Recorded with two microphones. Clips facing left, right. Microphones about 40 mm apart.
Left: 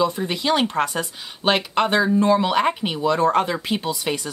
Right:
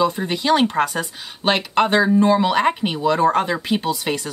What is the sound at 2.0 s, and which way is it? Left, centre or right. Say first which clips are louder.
Speech: right 1 dB; centre.